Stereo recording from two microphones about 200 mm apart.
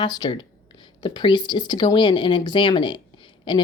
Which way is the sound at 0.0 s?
20° left (ahead or behind).